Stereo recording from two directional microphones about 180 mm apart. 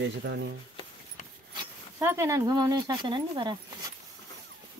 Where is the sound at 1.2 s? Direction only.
45° left (ahead or behind).